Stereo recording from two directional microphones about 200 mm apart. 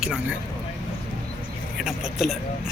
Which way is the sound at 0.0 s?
5° right (ahead or behind).